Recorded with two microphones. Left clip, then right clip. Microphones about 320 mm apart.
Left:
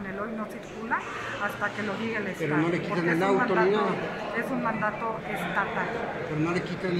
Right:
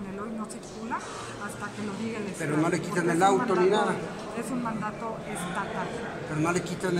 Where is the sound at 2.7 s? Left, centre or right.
Right.